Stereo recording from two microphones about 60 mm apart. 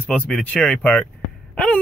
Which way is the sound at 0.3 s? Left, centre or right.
Left.